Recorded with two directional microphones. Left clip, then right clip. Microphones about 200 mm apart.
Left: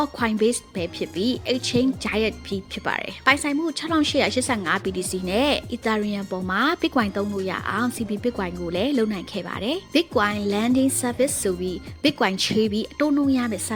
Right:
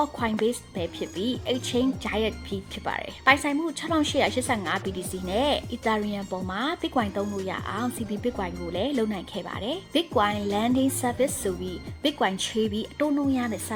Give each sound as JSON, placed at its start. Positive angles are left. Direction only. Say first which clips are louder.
{"t": 0.0, "sound": "a woman's voice", "louder": "left 3 dB", "side_deg": 40}